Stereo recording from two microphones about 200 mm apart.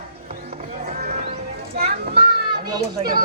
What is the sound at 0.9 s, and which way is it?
Clip-clop, 45° right (ahead or behind).